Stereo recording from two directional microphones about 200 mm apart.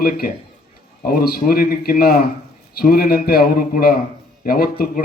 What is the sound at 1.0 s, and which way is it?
A man's voice, 50° left (ahead or behind).